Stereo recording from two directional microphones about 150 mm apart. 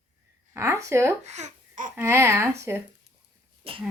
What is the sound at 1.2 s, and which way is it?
Babbling, 50° right (ahead or behind).